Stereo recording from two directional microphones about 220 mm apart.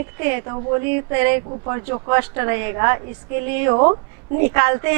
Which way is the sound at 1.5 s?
25° right (ahead or behind).